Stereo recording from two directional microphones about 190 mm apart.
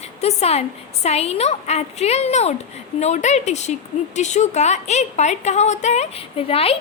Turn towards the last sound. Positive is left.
turn(degrees=30)  # may be behind; listen again after turning